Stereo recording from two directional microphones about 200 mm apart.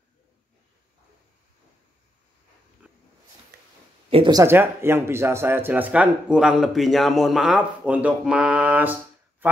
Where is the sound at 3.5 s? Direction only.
50° right (ahead or behind).